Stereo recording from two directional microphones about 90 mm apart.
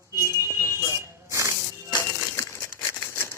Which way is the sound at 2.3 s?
30° left (ahead or behind).